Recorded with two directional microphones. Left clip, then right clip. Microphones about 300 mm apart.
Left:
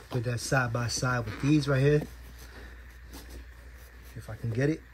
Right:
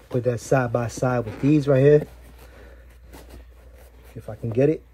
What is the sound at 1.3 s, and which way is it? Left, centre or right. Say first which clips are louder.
Speech: right 9 dB; centre.